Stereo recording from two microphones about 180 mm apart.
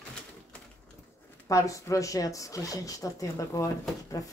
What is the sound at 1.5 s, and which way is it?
Speech, 20° left (ahead or behind).